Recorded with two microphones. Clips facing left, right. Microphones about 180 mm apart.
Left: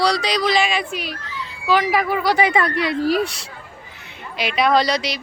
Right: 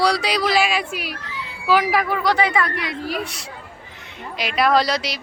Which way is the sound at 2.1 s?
10° left (ahead or behind).